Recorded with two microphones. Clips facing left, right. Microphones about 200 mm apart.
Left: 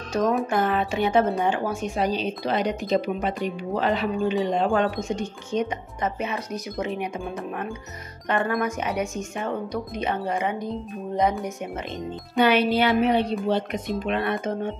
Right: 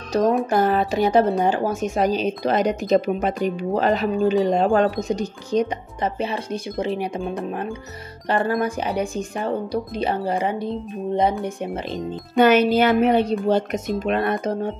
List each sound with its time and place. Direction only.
0.1 s speech: 35° right (ahead or behind)
12.4 s speech: 45° right (ahead or behind)